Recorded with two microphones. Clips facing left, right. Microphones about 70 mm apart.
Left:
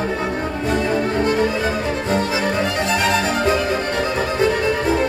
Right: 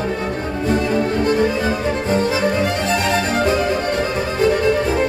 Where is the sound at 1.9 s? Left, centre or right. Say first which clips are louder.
Right 2 dB; right.